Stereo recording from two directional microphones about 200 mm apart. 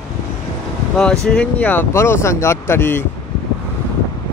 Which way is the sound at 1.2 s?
5° left (ahead or behind).